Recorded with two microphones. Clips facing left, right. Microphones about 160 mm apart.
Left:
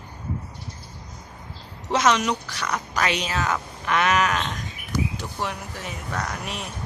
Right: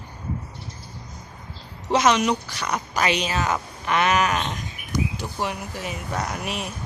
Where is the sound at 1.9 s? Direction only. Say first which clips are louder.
Right 2 dB; 5° right (ahead or behind).